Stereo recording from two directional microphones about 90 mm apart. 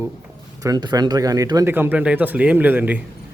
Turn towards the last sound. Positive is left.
turn(degrees=-20)  # may be behind; listen again after turning